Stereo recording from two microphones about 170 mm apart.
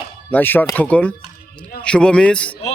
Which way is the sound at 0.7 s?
10° left (ahead or behind).